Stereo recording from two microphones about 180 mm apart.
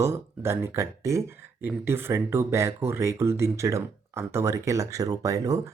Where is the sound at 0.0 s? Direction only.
15° right (ahead or behind).